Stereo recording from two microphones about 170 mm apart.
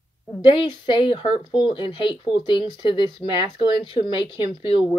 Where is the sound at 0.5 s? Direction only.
30° left (ahead or behind).